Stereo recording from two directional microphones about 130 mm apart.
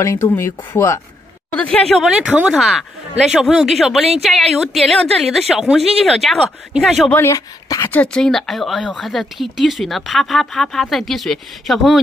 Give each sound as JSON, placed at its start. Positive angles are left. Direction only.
{"t": 0.0, "sound": "speech", "side_deg": 20}
{"t": 1.5, "sound": "speech", "side_deg": 5}
{"t": 7.1, "sound": "speech", "side_deg": 20}
{"t": 7.9, "sound": "speech", "side_deg": 10}